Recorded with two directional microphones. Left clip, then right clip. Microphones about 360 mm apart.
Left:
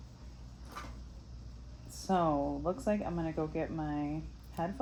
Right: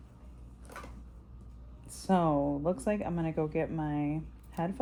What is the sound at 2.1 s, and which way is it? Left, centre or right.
Speech, right.